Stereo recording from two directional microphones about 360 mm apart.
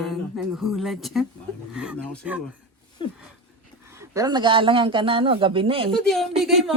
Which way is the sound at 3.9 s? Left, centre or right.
Centre.